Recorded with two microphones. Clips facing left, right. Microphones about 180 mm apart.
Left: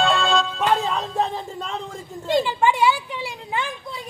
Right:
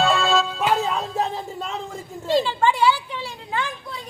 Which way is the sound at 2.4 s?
15° left (ahead or behind).